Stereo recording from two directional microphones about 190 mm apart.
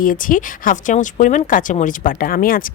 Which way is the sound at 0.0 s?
45° left (ahead or behind).